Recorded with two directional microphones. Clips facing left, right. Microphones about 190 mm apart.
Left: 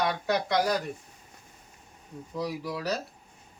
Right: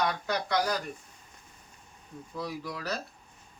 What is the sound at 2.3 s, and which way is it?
Speech, 20° left (ahead or behind).